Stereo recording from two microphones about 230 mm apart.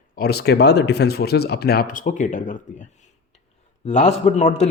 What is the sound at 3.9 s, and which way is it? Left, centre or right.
Speech, left.